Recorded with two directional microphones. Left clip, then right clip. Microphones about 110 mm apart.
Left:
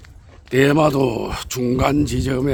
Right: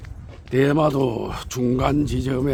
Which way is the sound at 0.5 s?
70° left (ahead or behind).